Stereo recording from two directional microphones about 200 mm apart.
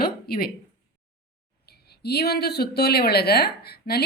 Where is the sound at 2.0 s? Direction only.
55° left (ahead or behind).